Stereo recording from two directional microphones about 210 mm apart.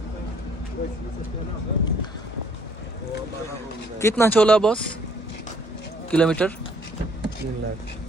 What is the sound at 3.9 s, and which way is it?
Speech, 10° left (ahead or behind).